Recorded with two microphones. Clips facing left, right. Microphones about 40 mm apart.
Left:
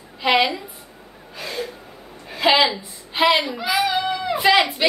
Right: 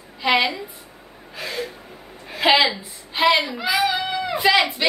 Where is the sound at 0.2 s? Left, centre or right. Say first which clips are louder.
Left 1 dB; centre.